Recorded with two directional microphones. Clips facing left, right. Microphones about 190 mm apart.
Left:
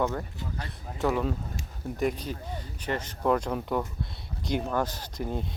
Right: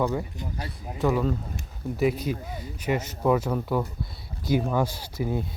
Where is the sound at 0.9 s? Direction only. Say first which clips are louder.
Right 3 dB; centre (ahead or behind).